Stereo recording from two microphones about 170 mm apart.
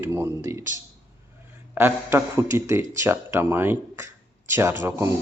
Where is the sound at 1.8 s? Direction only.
15° right (ahead or behind).